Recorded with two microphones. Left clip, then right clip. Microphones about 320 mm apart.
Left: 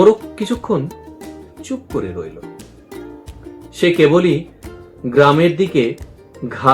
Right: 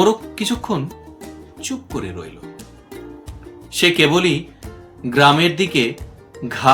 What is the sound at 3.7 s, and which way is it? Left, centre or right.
Speech, right.